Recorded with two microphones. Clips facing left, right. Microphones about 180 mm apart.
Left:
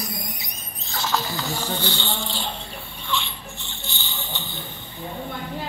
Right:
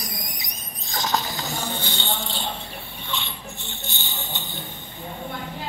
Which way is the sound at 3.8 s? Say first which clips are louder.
Left 1 dB; 45° right (ahead or behind).